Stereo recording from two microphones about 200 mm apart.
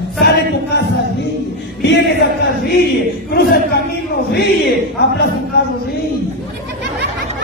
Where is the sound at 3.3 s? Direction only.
50° left (ahead or behind).